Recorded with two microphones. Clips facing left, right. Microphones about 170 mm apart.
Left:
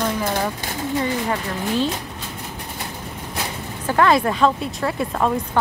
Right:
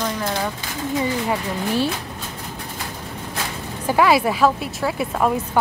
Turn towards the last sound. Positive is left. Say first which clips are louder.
# even
turn(degrees=-5)  # may be behind; listen again after turning